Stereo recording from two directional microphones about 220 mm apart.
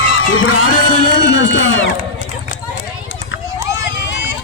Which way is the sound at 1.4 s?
55° left (ahead or behind).